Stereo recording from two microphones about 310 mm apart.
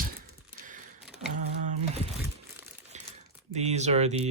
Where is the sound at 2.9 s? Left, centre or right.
Right.